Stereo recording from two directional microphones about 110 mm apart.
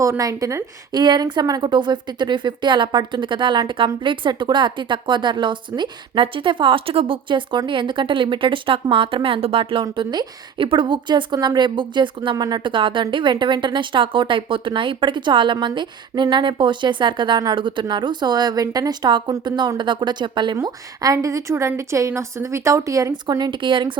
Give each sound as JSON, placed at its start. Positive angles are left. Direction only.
{"t": 0.0, "sound": "a woman's voice", "side_deg": -30}
{"t": 9.8, "sound": "a woman's voice", "side_deg": -40}
{"t": 20.7, "sound": "a woman's voice", "side_deg": -35}
{"t": 23.2, "sound": "a woman's voice", "side_deg": -45}